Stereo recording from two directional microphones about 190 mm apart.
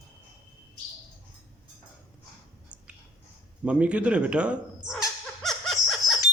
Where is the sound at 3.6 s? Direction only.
5° right (ahead or behind).